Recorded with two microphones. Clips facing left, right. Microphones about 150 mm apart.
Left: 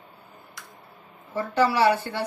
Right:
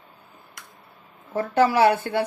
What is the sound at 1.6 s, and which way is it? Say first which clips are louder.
Speech: right 3 dB; 55° right (ahead or behind).